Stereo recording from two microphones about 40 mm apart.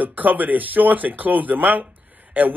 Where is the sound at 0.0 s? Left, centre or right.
Right.